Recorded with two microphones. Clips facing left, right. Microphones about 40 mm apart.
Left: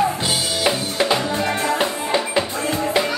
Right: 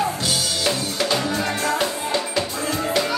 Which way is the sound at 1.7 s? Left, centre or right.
Left.